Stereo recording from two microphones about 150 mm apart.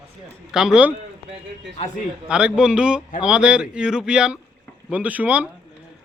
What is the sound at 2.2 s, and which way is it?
Speech, 5° right (ahead or behind).